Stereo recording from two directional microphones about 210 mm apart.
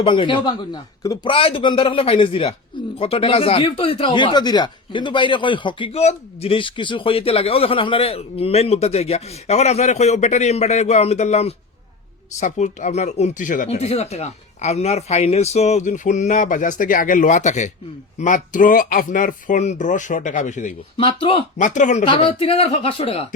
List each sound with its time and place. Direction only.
0.0 s a man's voice: 25° left (ahead or behind)
21.0 s a man's voice: 25° left (ahead or behind)
21.6 s speech: 35° left (ahead or behind)
22.0 s a man's voice: 25° left (ahead or behind)